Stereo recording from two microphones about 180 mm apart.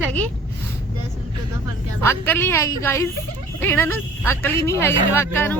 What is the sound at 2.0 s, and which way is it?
Speech, 10° left (ahead or behind).